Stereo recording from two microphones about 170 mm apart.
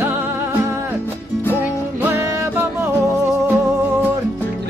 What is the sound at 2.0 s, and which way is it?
Music, 10° right (ahead or behind).